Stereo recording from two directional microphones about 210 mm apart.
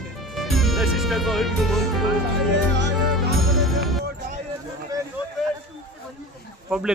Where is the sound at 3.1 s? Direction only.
Centre (ahead or behind).